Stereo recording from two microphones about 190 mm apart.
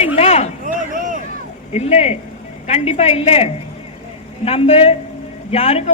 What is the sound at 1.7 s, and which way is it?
A man's voice, 35° left (ahead or behind).